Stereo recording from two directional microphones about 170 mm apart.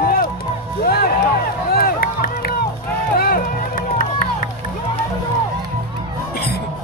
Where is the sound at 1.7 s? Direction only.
60° left (ahead or behind).